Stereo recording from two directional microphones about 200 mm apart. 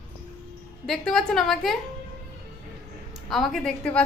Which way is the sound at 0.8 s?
Centre (ahead or behind).